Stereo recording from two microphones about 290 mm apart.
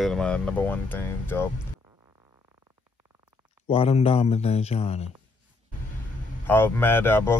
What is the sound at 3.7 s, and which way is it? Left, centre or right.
Speech, centre.